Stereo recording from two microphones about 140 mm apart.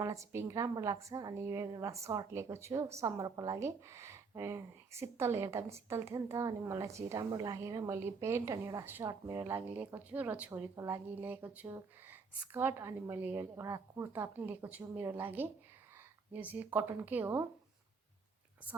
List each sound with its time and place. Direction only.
0.0 s a woman's voice: 25° right (ahead or behind)